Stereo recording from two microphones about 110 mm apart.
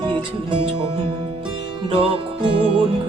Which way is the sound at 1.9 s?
50° right (ahead or behind).